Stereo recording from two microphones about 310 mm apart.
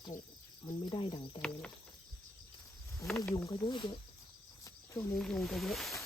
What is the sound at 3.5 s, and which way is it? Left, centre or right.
Speech, centre.